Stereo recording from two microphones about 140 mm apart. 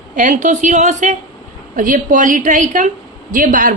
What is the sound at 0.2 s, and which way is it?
Speech, 65° right (ahead or behind).